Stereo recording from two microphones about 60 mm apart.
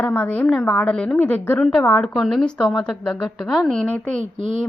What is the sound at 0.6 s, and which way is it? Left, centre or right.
Speech, centre.